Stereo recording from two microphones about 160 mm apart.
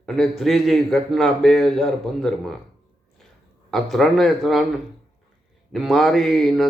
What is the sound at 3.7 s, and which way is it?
Speech, centre (ahead or behind).